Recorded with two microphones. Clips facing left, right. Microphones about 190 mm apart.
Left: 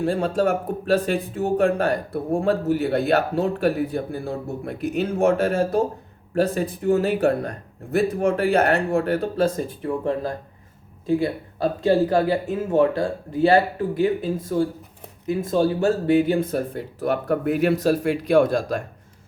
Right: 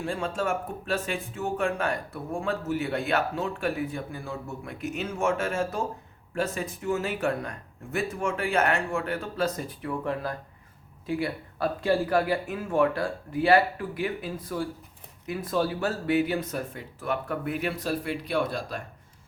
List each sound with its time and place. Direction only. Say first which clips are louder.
0.0 s speech: left 8 dB; 35° left (ahead or behind)